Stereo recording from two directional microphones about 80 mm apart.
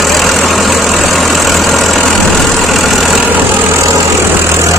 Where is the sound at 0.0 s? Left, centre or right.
Centre.